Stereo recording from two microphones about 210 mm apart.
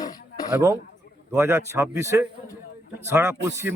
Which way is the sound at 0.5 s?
15° right (ahead or behind).